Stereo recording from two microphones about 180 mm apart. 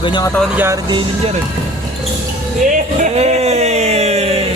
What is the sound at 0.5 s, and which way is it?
Speech, 10° right (ahead or behind).